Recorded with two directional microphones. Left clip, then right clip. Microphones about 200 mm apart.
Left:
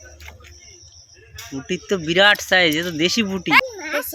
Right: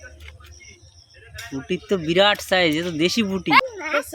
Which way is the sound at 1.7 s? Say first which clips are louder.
Left 1 dB; centre (ahead or behind).